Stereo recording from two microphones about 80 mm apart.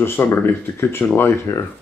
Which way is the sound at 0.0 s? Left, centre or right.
Left.